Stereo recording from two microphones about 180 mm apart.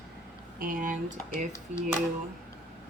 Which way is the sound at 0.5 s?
50° right (ahead or behind).